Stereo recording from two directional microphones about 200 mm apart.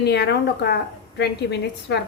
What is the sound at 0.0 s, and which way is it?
A woman's voice, 55° left (ahead or behind).